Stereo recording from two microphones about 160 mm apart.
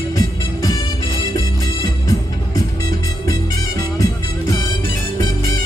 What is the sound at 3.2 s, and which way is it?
Music, 20° left (ahead or behind).